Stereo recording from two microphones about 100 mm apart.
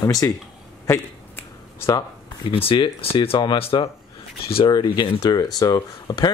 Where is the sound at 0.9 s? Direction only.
30° left (ahead or behind).